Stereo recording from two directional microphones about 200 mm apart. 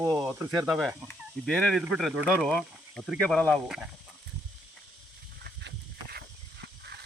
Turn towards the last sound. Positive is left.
turn(degrees=-55)  # may be behind; listen again after turning